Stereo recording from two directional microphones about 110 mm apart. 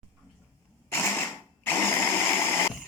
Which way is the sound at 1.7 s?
20° left (ahead or behind).